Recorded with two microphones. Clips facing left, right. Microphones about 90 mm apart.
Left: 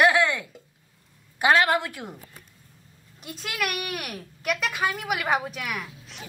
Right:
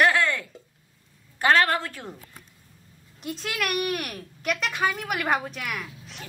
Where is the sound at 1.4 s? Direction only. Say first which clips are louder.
Left 1 dB; 15° left (ahead or behind).